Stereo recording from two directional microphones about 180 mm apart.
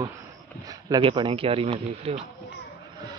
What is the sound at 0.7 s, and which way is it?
Speech, 25° right (ahead or behind).